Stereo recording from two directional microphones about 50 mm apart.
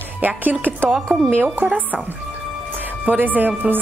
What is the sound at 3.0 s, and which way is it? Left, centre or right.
Speech, right.